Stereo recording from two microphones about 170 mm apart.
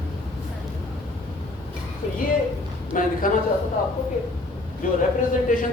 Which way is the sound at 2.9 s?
50° left (ahead or behind).